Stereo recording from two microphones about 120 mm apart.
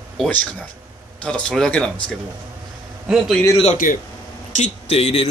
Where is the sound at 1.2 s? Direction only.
10° left (ahead or behind).